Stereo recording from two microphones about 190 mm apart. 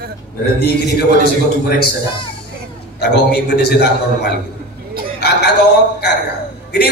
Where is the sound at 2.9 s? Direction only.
60° left (ahead or behind).